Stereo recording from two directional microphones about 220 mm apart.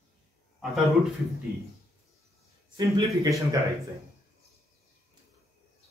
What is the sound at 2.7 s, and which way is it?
Speech, 15° right (ahead or behind).